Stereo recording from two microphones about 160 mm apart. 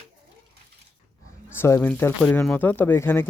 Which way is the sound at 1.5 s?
15° left (ahead or behind).